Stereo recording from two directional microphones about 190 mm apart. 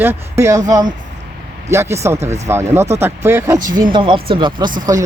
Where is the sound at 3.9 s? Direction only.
25° right (ahead or behind).